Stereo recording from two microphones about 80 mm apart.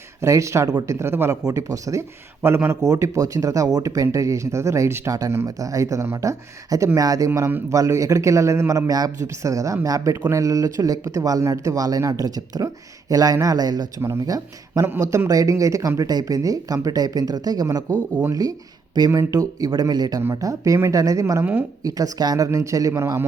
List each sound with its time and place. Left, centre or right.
0.2 s speech: right
1.5 s speech: right
2.8 s speech: right
8.9 s speech: right
22.5 s speech: right